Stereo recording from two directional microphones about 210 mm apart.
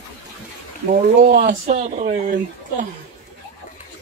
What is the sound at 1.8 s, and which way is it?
Speech, 35° right (ahead or behind).